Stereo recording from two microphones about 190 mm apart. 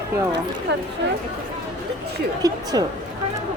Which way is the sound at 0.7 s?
70° right (ahead or behind).